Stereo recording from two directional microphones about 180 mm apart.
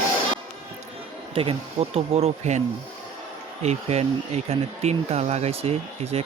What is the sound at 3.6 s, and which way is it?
Speech, 35° right (ahead or behind).